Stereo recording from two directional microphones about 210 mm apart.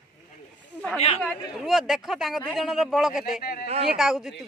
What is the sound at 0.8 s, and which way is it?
Speech, 5° left (ahead or behind).